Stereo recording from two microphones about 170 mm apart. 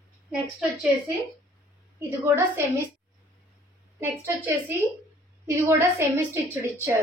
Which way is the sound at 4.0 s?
15° right (ahead or behind).